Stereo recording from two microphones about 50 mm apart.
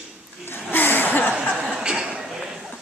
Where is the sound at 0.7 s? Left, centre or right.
Left.